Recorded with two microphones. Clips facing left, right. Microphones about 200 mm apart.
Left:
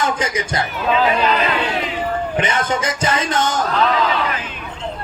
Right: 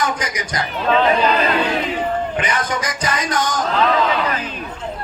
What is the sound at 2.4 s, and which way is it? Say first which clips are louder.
A man's voice: left 2 dB; 25° left (ahead or behind).